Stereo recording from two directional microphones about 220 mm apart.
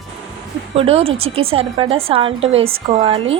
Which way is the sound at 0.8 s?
25° right (ahead or behind).